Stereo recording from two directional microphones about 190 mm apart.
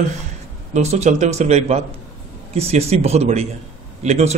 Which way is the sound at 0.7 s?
35° right (ahead or behind).